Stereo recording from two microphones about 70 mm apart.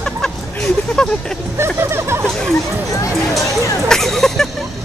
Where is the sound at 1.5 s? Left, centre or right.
Right.